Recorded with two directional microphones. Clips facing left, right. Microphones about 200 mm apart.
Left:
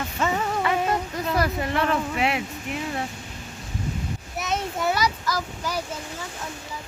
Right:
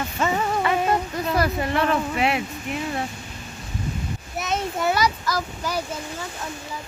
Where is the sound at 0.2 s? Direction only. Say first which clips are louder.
Right 1 dB; 15° right (ahead or behind).